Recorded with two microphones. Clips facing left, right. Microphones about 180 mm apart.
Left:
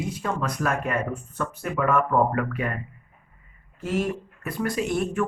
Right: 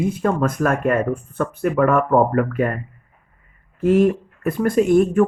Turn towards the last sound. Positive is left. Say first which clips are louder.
# right 11 dB
turn(degrees=-50)  # may be behind; listen again after turning